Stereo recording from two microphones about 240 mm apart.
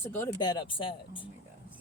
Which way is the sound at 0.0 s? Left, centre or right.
Centre.